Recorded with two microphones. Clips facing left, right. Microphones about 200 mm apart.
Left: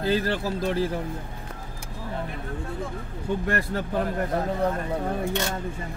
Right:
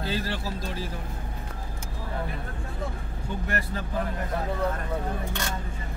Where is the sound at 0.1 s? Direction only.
55° left (ahead or behind).